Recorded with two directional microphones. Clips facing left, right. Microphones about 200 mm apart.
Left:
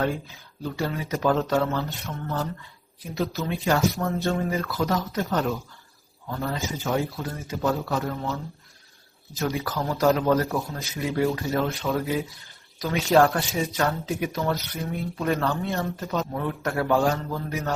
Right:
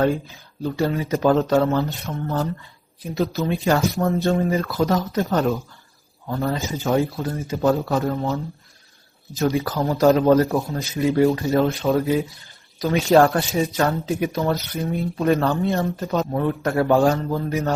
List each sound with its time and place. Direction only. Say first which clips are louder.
0.6 s a man's voice: right 6 dB; 30° right (ahead or behind)
9.4 s a man's voice: right 6 dB; 35° right (ahead or behind)